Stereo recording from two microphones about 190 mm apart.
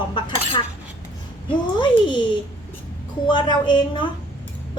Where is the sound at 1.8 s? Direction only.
25° left (ahead or behind).